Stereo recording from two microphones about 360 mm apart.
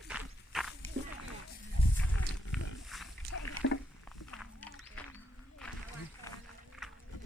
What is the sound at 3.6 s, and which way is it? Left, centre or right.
Rowboat, left.